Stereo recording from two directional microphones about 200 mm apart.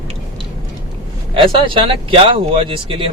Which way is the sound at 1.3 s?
25° right (ahead or behind).